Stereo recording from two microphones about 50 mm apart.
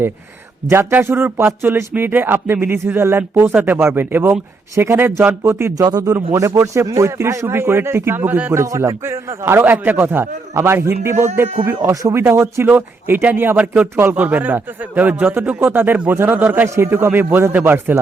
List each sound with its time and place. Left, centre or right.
0.7 s a man's voice: right
5.4 s speech: right
6.3 s speech: right
8.5 s speech: right
9.6 s a man's voice: right
12.6 s a man's voice: right
15.5 s a man's voice: right